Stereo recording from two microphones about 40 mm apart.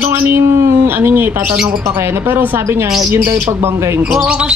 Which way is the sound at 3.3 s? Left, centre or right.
Right.